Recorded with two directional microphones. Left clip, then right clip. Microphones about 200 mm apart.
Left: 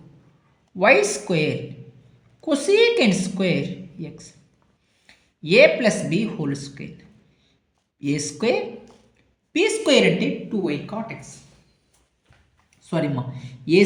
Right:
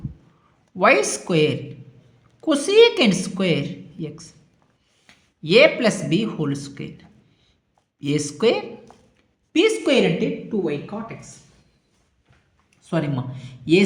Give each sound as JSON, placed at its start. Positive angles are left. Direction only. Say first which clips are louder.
{"t": 0.8, "sound": "a woman's voice", "louder": "even", "side_deg": -20}
{"t": 8.0, "sound": "a woman's voice", "louder": "right 3 dB", "side_deg": -20}
{"t": 9.8, "sound": "a woman's voice", "louder": "left 1 dB", "side_deg": 0}
{"t": 12.8, "sound": "speech", "louder": "even", "side_deg": -15}